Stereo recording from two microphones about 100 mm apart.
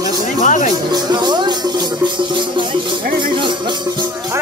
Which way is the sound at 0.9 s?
45° right (ahead or behind).